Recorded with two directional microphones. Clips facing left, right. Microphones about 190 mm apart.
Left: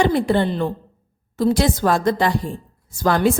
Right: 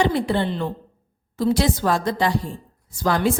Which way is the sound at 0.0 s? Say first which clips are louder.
Left 3 dB; 50° left (ahead or behind).